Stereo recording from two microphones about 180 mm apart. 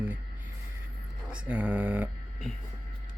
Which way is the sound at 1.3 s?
10° right (ahead or behind).